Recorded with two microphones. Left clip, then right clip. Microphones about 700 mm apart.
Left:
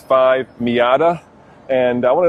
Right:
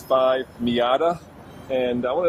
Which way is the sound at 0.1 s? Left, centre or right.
Left.